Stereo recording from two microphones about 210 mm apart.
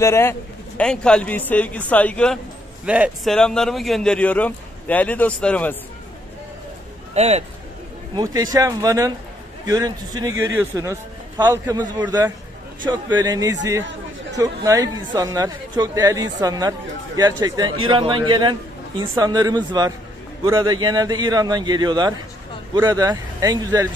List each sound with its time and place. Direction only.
0.0 s a man's voice: 10° left (ahead or behind)
2.8 s speech: 5° right (ahead or behind)
7.2 s speech: 30° right (ahead or behind)
8.1 s a man's voice: 20° right (ahead or behind)